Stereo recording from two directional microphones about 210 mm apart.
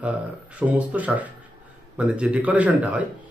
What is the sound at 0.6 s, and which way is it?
Speech, 5° right (ahead or behind).